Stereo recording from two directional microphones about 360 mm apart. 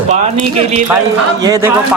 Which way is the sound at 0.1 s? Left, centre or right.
Centre.